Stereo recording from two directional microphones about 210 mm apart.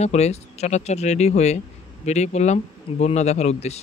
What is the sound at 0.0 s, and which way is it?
Speech, 30° left (ahead or behind).